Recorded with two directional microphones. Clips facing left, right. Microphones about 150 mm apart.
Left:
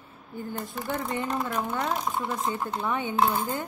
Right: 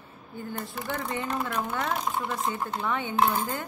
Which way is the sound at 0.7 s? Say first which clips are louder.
Left 2 dB; 20° left (ahead or behind).